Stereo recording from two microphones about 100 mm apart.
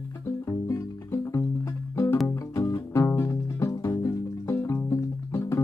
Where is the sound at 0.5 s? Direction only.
25° left (ahead or behind).